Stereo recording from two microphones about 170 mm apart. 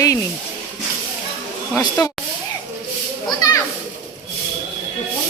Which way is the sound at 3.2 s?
20° left (ahead or behind).